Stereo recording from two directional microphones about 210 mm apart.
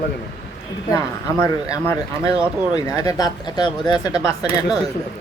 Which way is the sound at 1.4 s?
15° left (ahead or behind).